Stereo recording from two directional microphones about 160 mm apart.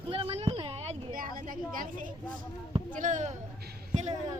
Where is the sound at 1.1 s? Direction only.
60° right (ahead or behind).